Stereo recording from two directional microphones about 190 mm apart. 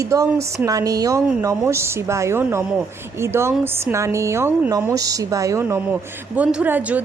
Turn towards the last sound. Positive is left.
turn(degrees=-10)  # may be behind; listen again after turning